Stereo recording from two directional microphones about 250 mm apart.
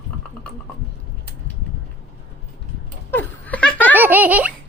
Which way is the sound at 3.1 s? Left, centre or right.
Centre.